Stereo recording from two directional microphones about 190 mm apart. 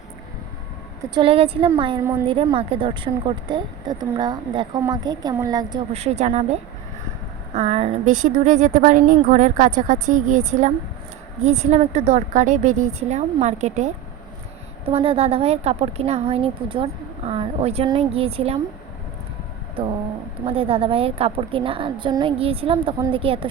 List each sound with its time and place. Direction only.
1.1 s a woman's voice: 30° right (ahead or behind)
5.9 s a woman's voice: 35° right (ahead or behind)
19.8 s a woman's voice: 30° right (ahead or behind)